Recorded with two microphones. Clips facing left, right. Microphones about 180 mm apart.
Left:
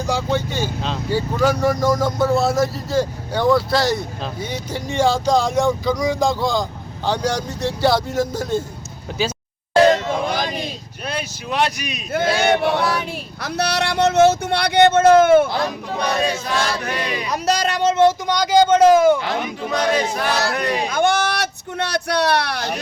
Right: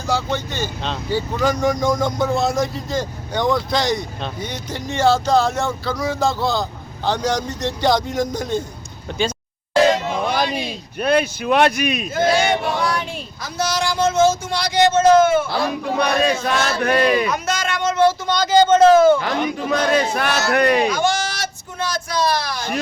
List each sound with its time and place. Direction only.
0.1 s speech: 10° left (ahead or behind)
11.0 s speech: 60° right (ahead or behind)
12.4 s speech: 65° left (ahead or behind)
12.8 s speech: 5° left (ahead or behind)
13.4 s speech: 65° left (ahead or behind)
16.0 s speech: 60° right (ahead or behind)
17.2 s speech: 35° left (ahead or behind); by 19.2 s 15° left (ahead or behind)
19.2 s speech: 50° right (ahead or behind)
20.9 s a sound: 60° left (ahead or behind)